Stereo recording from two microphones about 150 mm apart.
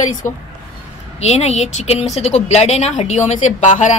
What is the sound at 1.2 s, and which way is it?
A woman's voice, 45° left (ahead or behind).